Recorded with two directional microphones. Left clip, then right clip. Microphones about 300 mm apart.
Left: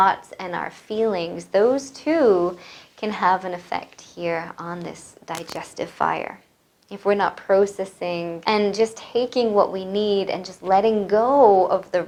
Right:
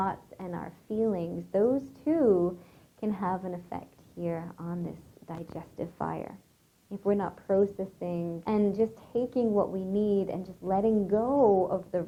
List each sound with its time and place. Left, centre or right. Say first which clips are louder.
0.0 s a woman's voice: left 14 dB; centre
9.5 s a woman's voice: left 12 dB; centre
9.9 s a woman's voice: left 7 dB; centre